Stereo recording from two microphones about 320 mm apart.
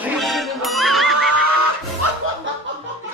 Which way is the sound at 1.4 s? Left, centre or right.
Right.